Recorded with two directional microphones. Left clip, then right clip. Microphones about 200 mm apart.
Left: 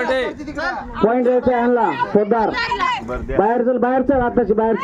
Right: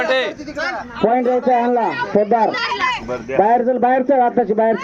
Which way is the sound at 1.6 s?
20° left (ahead or behind).